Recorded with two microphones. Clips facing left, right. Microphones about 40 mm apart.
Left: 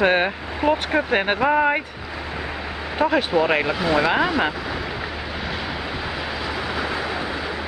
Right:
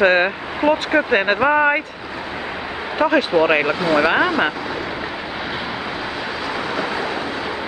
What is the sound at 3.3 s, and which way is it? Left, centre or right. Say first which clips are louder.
Speech: right 3 dB; centre.